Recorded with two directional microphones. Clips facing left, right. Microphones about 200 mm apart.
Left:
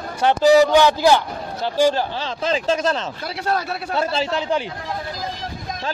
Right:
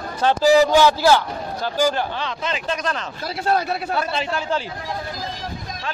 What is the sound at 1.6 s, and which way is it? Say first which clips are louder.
A man's voice: left 3 dB; 30° left (ahead or behind).